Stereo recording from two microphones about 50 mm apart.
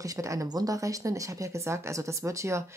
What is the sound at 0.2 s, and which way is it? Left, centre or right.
Speech, right.